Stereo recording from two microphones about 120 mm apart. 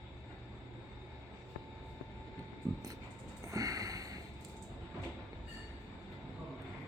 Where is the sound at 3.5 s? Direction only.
30° right (ahead or behind).